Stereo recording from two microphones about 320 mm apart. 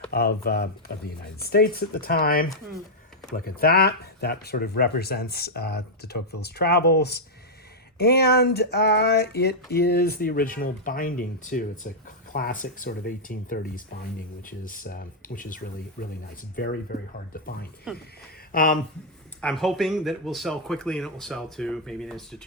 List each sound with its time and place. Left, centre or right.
0.1 s speech: left
7.9 s a sound: left
9.7 s speech: left
17.9 s speech: centre
18.5 s speech: left
19.4 s speech: centre